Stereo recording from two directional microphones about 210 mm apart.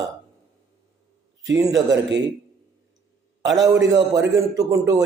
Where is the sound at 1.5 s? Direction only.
15° right (ahead or behind).